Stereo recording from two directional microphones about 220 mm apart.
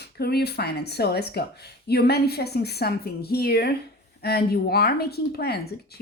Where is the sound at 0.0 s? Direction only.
45° left (ahead or behind).